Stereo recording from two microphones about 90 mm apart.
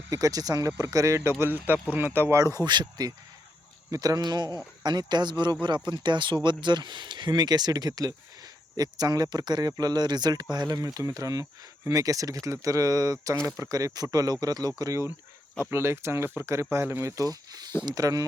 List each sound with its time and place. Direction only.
0.1 s speech: 40° right (ahead or behind); by 2.4 s 25° right (ahead or behind)
2.4 s speech: 45° right (ahead or behind)